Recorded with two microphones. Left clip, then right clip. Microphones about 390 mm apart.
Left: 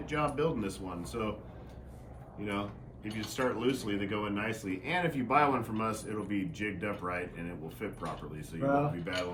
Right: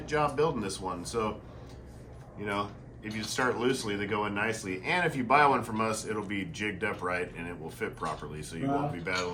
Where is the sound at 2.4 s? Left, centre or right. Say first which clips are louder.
Right 4 dB; centre.